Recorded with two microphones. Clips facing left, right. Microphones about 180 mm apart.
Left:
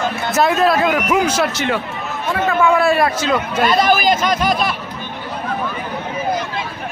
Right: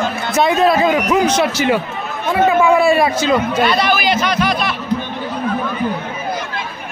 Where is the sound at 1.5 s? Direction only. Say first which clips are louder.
Right 4 dB; 5° right (ahead or behind).